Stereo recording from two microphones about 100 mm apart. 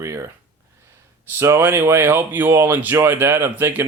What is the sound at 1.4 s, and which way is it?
Speech, 25° right (ahead or behind).